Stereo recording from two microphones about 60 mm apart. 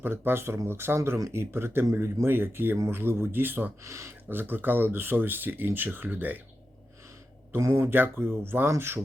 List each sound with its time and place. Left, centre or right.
0.0 s speech: right
3.8 s speech: right
4.3 s speech: right
7.6 s speech: right